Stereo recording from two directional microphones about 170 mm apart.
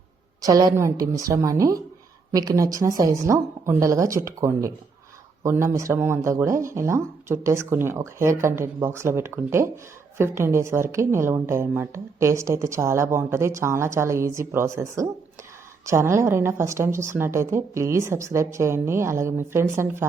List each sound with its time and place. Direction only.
0.4 s a woman's voice: 20° right (ahead or behind)